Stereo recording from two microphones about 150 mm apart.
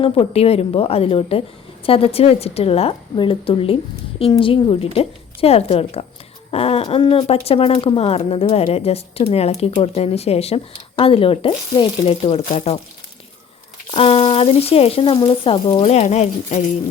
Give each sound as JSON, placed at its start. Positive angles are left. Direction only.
{"t": 0.0, "sound": "speech", "side_deg": 40}
{"t": 13.9, "sound": "speech", "side_deg": 40}
{"t": 15.8, "sound": "speech", "side_deg": 50}